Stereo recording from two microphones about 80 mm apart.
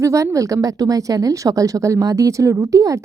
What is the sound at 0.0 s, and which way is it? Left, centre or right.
A woman's voice, right.